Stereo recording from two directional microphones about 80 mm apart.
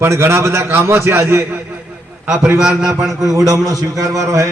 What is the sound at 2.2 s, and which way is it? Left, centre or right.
Speech, centre.